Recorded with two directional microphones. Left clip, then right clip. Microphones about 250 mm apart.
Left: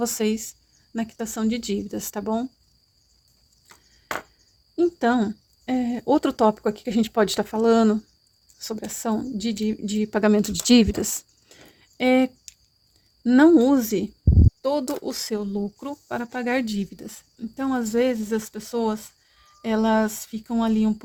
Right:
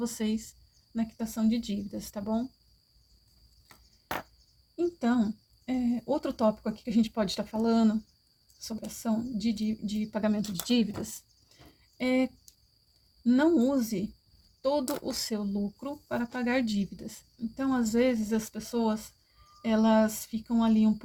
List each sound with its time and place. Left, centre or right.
0.0 s speech: left
4.8 s speech: left